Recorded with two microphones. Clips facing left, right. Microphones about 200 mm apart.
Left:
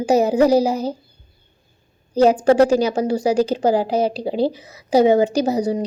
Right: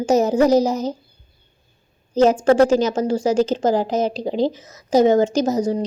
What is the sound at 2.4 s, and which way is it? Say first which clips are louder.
Speech: even; 10° left (ahead or behind).